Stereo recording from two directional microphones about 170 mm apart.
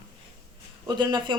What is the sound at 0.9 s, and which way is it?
Speech, 25° right (ahead or behind).